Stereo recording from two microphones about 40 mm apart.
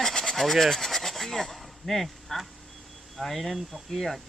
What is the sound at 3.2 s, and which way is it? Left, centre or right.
Speech, centre.